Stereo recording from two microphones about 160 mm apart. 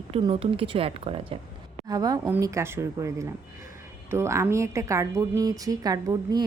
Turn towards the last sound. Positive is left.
turn(degrees=-25)  # may be behind; listen again after turning